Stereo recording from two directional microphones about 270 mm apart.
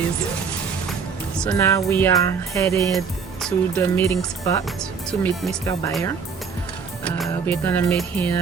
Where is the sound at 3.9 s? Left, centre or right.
Centre.